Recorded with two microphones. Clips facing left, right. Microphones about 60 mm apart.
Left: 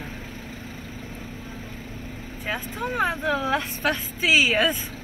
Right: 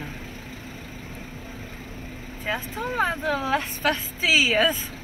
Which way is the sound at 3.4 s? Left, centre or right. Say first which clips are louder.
Even; right.